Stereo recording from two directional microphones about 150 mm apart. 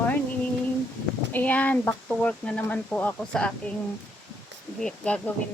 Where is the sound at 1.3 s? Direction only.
10° left (ahead or behind).